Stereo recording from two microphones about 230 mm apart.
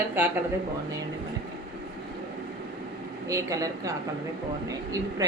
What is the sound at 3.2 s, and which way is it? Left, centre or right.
A woman's voice, centre.